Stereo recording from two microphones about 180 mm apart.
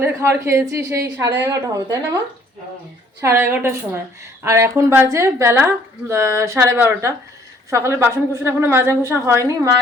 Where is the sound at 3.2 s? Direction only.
15° right (ahead or behind).